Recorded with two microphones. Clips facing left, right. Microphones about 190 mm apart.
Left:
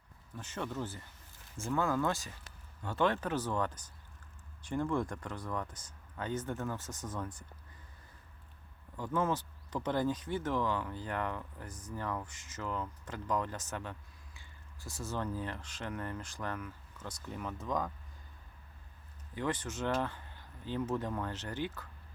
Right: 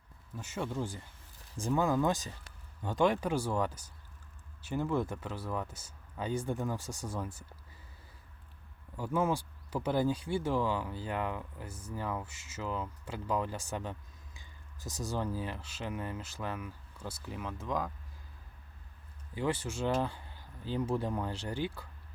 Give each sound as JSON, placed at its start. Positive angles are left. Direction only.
{"t": 0.3, "sound": "speech", "side_deg": -10}
{"t": 9.0, "sound": "speech", "side_deg": -10}
{"t": 19.3, "sound": "speech", "side_deg": -10}